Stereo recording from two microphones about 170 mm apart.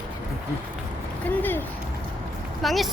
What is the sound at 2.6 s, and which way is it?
Speech, centre (ahead or behind).